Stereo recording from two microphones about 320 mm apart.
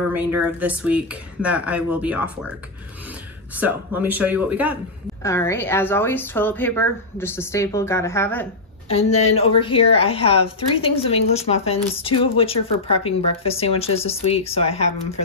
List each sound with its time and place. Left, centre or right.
0.1 s speech: centre
3.5 s speech: centre
5.2 s speech: centre
8.9 s speech: centre